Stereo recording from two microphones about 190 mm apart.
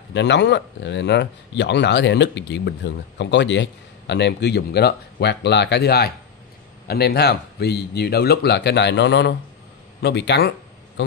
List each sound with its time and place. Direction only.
0.1 s a man's voice: 65° left (ahead or behind)